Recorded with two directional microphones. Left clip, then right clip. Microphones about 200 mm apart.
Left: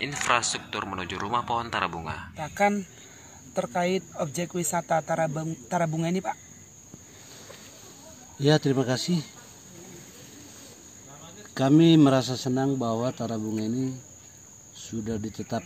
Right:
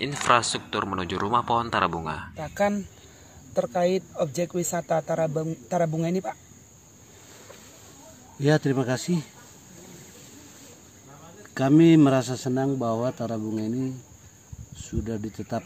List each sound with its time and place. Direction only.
0.0 s speech: 20° right (ahead or behind)
2.3 s speech: 55° right (ahead or behind)
8.4 s speech: 5° right (ahead or behind)
11.5 s speech: 5° right (ahead or behind)
14.9 s speech: 10° right (ahead or behind)